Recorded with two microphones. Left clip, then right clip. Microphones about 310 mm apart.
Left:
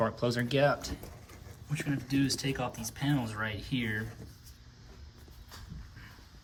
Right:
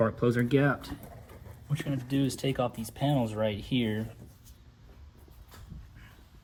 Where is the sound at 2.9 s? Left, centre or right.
Right.